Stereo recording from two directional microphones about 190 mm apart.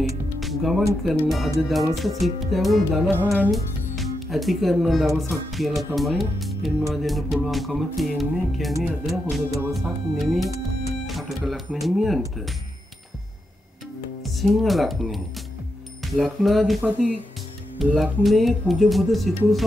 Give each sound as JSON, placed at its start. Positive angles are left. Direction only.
{"t": 0.4, "sound": "music", "side_deg": 0}
{"t": 1.2, "sound": "speech", "side_deg": 0}
{"t": 3.1, "sound": "music", "side_deg": -10}
{"t": 3.4, "sound": "speech", "side_deg": 0}
{"t": 9.5, "sound": "music", "side_deg": -15}
{"t": 9.8, "sound": "speech", "side_deg": 0}
{"t": 14.2, "sound": "speech", "side_deg": 0}